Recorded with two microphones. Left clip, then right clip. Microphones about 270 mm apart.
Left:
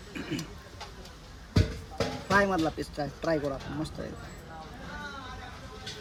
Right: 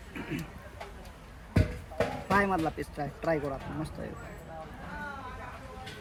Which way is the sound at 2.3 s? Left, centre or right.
Centre.